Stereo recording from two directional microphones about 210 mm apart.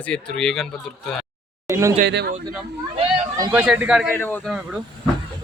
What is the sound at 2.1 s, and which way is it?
Speech, 55° right (ahead or behind).